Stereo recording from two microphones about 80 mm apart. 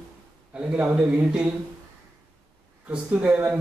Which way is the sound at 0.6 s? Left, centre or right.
Centre.